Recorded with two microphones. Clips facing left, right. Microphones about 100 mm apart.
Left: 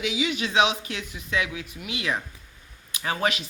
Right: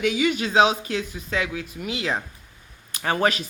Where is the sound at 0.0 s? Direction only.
50° right (ahead or behind); by 2.2 s 30° right (ahead or behind).